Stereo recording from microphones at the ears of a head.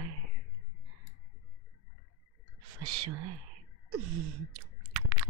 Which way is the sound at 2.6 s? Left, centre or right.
Right.